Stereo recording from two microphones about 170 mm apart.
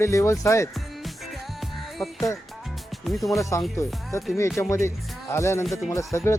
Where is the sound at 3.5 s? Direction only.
15° left (ahead or behind).